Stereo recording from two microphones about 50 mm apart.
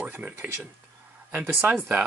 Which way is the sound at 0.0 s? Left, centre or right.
Right.